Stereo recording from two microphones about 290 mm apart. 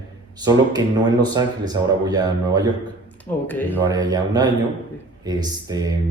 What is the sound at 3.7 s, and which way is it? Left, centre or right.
A man's voice, centre.